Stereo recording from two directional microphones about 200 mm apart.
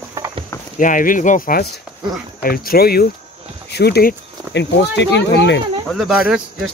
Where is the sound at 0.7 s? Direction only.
40° left (ahead or behind); by 5.6 s 60° left (ahead or behind).